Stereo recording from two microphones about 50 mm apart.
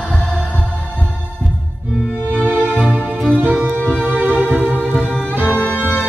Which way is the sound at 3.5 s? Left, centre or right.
Right.